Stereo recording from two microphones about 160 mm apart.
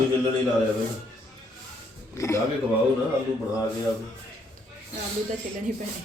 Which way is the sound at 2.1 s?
20° left (ahead or behind).